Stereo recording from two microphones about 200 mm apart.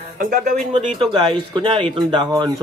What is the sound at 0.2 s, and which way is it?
Speech, 45° right (ahead or behind).